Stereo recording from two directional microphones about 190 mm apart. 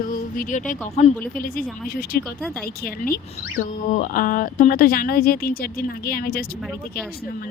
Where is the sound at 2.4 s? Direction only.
Centre (ahead or behind).